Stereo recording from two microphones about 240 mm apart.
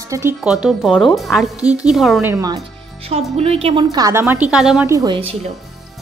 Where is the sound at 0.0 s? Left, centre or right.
Centre.